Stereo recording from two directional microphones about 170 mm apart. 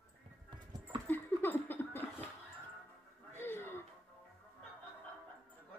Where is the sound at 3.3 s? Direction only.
15° left (ahead or behind).